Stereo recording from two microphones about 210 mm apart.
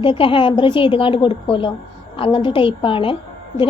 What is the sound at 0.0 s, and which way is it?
A woman's voice, 25° left (ahead or behind).